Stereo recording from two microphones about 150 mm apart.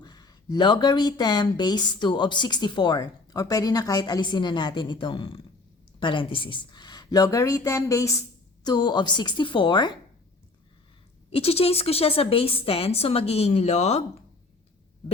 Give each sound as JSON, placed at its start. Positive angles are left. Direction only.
{"t": 0.0, "sound": "speech", "side_deg": 25}
{"t": 11.3, "sound": "a woman's voice", "side_deg": 40}